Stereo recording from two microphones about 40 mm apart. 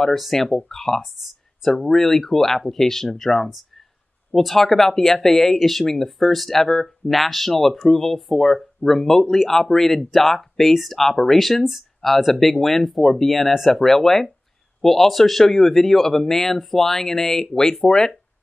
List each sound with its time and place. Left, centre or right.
0.0 s speech: centre
1.0 s speech: centre
1.7 s speech: centre